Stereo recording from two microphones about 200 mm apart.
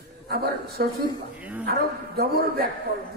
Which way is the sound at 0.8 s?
45° right (ahead or behind).